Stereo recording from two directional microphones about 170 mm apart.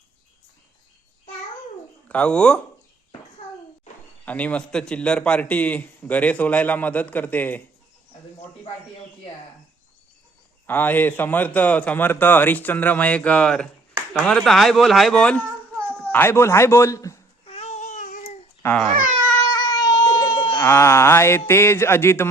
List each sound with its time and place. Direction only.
2.0 s speech: 5° left (ahead or behind)
4.3 s a man's voice: 10° left (ahead or behind)
10.7 s a man's voice: 10° left (ahead or behind)
17.4 s babbling: 35° left (ahead or behind)
18.6 s speech: 5° left (ahead or behind)
19.5 s baby cry: 20° left (ahead or behind)
20.6 s a man's voice: 15° left (ahead or behind)